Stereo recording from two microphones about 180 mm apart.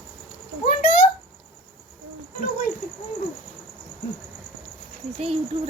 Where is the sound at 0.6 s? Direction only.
45° left (ahead or behind).